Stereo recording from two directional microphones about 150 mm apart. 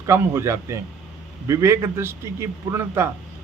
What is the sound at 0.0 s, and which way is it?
A man's voice, 20° right (ahead or behind).